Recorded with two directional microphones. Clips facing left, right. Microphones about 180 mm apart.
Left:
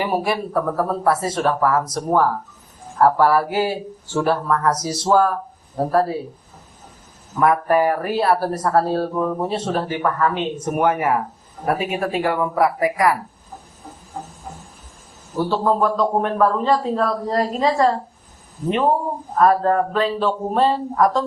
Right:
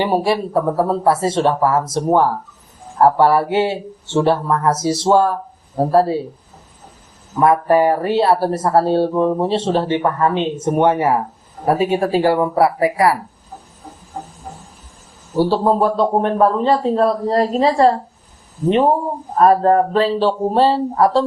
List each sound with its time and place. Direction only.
0.0 s speech: 25° right (ahead or behind)
7.3 s a man's voice: 25° right (ahead or behind)
15.4 s a man's voice: 35° right (ahead or behind)
19.4 s a man's voice: 30° right (ahead or behind)